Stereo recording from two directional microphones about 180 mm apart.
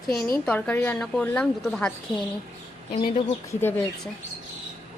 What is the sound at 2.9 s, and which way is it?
Speech, 35° left (ahead or behind).